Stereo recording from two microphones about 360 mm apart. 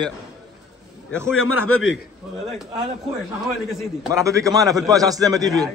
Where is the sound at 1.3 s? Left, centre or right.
Left.